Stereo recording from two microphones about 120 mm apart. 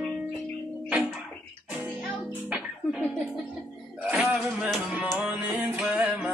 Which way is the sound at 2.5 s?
5° right (ahead or behind).